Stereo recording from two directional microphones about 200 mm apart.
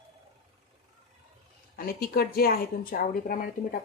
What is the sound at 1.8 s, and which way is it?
Speech, 50° left (ahead or behind).